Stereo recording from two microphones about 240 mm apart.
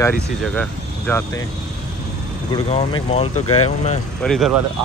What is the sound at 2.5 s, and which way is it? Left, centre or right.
Speech, left.